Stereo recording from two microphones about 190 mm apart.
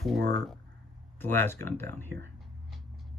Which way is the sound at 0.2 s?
60° right (ahead or behind).